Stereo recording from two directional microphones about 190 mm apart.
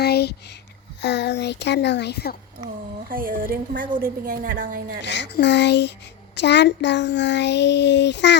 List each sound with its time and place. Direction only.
0.0 s a sound: 60° left (ahead or behind)
1.0 s speech: 65° left (ahead or behind)
3.1 s a woman's voice: 50° right (ahead or behind)
5.0 s a child's voice: 65° left (ahead or behind)